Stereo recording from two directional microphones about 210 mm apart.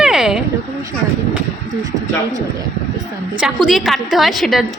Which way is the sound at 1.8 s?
15° right (ahead or behind).